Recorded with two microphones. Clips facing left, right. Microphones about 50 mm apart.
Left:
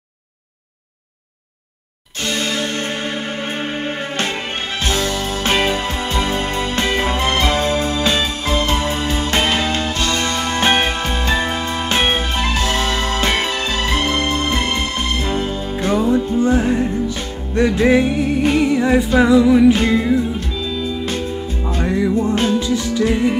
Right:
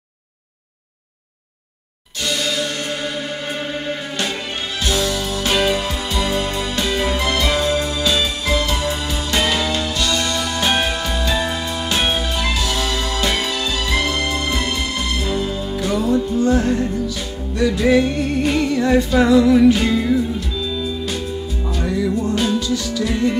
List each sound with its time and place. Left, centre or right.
2.2 s music: left
4.8 s music: left
18.0 s music: centre
19.7 s music: left
20.3 s music: left